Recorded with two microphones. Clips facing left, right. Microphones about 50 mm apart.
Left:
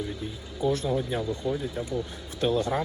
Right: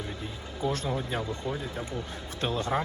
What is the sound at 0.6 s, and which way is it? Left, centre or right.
Speech, right.